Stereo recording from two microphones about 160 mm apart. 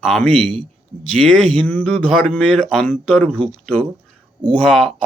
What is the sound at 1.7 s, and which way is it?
Speech, 10° left (ahead or behind).